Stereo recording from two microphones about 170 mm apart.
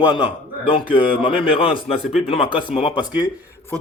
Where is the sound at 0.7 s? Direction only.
30° left (ahead or behind).